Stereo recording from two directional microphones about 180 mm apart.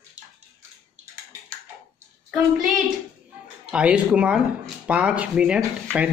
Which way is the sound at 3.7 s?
5° right (ahead or behind).